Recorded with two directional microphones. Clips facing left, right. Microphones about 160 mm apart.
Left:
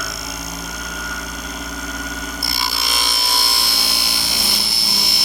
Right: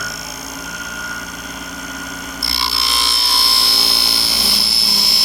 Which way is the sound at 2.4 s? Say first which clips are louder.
Right 3 dB; 45° left (ahead or behind).